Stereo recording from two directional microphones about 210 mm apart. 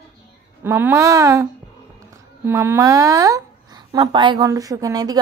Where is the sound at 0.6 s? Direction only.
10° right (ahead or behind).